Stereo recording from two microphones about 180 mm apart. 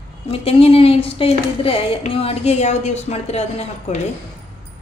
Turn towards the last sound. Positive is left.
turn(degrees=35)  # may be behind; listen again after turning